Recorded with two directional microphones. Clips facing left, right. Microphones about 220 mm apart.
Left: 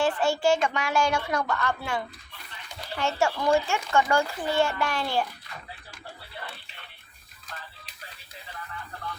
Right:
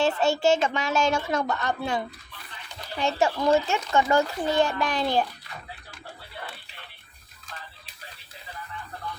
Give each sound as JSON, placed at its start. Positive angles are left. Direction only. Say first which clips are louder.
{"t": 0.0, "sound": "a child's voice", "louder": "right 2 dB", "side_deg": -25}